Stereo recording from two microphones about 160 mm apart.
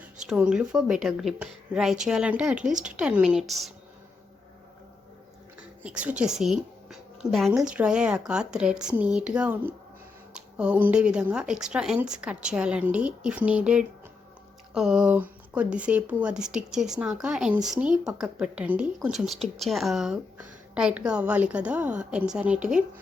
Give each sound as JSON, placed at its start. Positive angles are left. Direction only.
{"t": 0.3, "sound": "a woman's voice", "side_deg": -5}
{"t": 5.8, "sound": "a woman's voice", "side_deg": -5}